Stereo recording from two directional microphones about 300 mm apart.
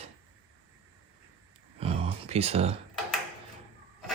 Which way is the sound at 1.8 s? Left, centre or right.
Centre.